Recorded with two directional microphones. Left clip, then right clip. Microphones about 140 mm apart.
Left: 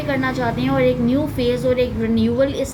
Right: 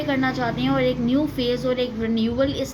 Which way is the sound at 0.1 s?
45° right (ahead or behind).